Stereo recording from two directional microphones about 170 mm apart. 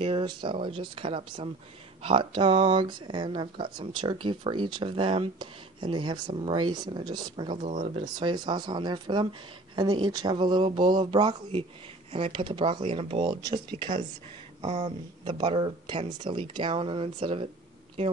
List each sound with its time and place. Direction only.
0.0 s speech: 30° right (ahead or behind)
7.6 s speech: 45° right (ahead or behind)
8.0 s speech: 25° right (ahead or behind)